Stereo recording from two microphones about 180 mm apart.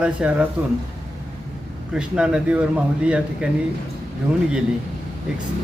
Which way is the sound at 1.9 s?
5° right (ahead or behind).